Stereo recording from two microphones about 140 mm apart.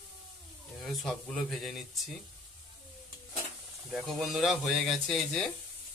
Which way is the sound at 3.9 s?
Centre (ahead or behind).